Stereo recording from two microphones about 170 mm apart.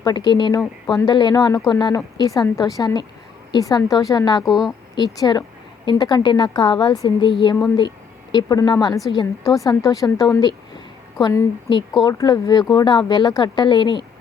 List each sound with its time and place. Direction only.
0.0 s speech: 25° left (ahead or behind)
4.4 s speech: centre (ahead or behind)
4.9 s a woman's voice: 25° left (ahead or behind)